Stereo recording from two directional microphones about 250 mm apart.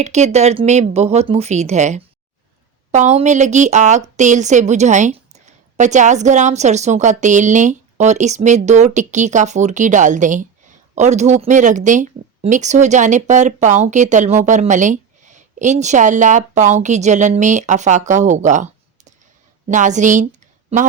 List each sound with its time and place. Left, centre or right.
0.0 s a woman's voice: right